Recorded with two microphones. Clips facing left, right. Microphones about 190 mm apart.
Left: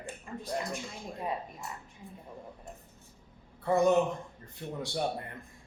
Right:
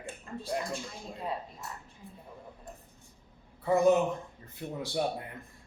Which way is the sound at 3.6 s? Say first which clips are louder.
Right 1 dB; centre (ahead or behind).